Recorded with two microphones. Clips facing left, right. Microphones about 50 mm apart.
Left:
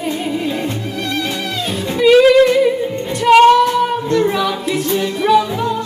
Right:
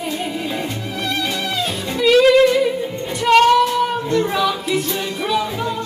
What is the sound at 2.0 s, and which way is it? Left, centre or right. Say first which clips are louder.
Music: left 3 dB; centre.